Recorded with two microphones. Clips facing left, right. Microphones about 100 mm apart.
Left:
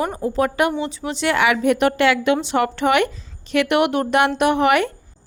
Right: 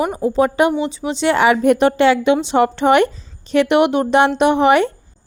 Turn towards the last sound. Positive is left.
turn(degrees=-25)  # may be behind; listen again after turning